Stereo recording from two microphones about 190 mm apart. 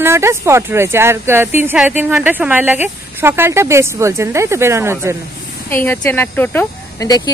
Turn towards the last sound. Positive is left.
turn(degrees=20)  # may be behind; listen again after turning